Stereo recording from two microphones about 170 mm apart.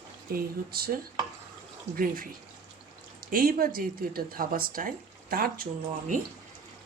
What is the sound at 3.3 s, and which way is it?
Speech, 60° right (ahead or behind).